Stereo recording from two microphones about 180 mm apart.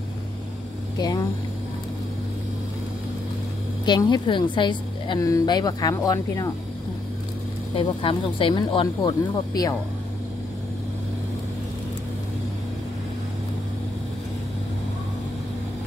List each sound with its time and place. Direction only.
0.9 s a woman's voice: 20° left (ahead or behind)
3.8 s a woman's voice: 25° left (ahead or behind)
7.7 s a woman's voice: 30° left (ahead or behind)